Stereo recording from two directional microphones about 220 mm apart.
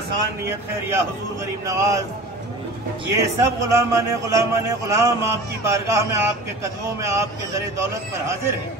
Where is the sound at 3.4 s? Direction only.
15° right (ahead or behind).